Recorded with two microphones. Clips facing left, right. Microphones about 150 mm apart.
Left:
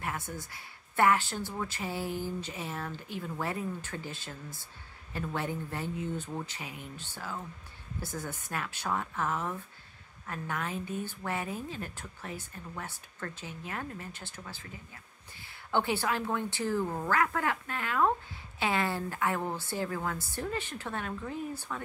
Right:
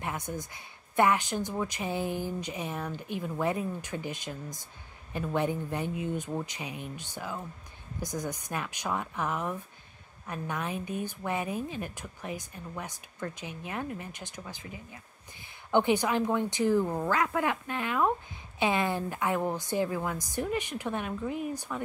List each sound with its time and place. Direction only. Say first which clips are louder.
0.0 s a woman's voice: right 2 dB; 20° right (ahead or behind)